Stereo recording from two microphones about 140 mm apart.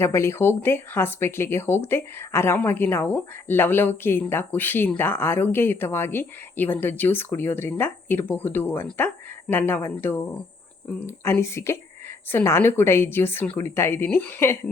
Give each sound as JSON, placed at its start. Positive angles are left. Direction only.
{"t": 0.0, "sound": "speech", "side_deg": 20}